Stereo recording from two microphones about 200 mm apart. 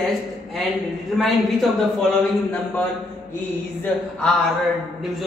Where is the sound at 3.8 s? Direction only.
5° left (ahead or behind).